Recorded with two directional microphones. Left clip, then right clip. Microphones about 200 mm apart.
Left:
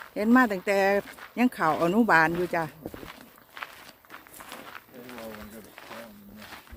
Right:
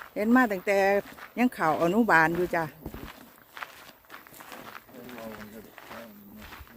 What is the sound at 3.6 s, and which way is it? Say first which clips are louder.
Walk: left 1 dB; 20° right (ahead or behind).